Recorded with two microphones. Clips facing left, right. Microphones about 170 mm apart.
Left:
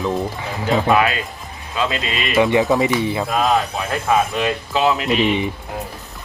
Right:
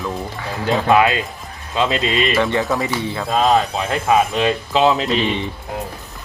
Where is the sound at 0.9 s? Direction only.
20° right (ahead or behind).